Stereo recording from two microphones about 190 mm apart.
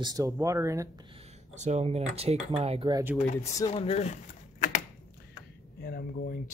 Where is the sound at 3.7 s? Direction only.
35° left (ahead or behind).